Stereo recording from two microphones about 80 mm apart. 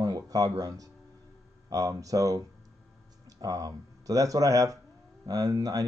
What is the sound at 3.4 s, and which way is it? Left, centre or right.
Speech, right.